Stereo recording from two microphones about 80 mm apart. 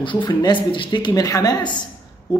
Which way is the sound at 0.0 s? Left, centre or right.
Left.